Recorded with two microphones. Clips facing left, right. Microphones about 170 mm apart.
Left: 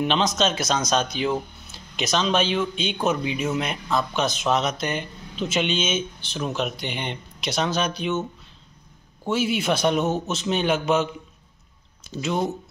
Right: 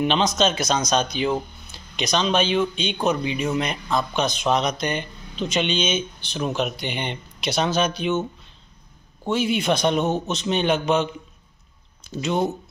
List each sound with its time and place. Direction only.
0.0 s speech: centre (ahead or behind)
9.3 s speech: 5° left (ahead or behind)